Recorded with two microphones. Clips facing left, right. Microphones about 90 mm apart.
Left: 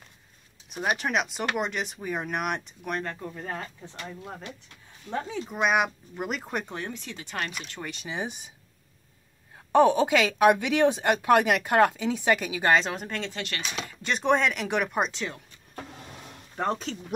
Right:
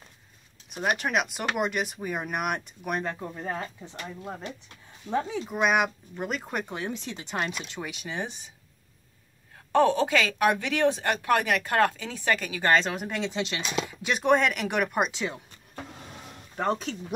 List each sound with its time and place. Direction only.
0.7 s speech: centre (ahead or behind)
5.1 s speech: 15° right (ahead or behind)
5.4 s speech: centre (ahead or behind)
6.9 s speech: 20° right (ahead or behind)
7.8 s speech: 5° right (ahead or behind)
9.7 s speech: 15° left (ahead or behind)
12.9 s speech: 10° right (ahead or behind)
14.0 s speech: 5° right (ahead or behind)
16.5 s speech: centre (ahead or behind)